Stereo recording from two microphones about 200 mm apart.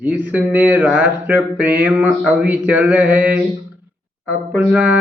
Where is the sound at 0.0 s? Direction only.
10° right (ahead or behind).